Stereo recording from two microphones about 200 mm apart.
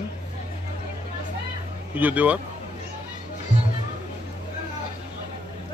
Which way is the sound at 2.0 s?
10° right (ahead or behind).